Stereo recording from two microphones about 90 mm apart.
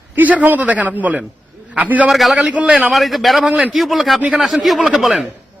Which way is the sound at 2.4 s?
15° right (ahead or behind).